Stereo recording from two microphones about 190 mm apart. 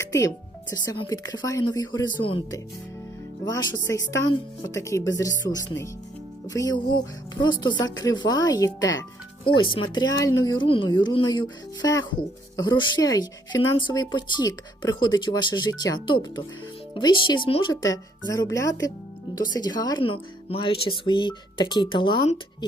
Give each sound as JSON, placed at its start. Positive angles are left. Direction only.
{"t": 0.0, "sound": "speech", "side_deg": 15}